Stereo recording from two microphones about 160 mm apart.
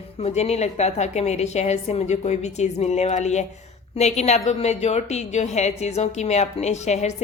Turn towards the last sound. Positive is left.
turn(degrees=45)  # may be behind; listen again after turning